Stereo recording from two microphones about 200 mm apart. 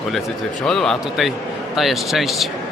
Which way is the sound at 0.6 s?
5° left (ahead or behind).